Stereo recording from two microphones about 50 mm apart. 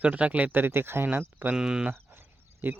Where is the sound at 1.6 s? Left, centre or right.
Centre.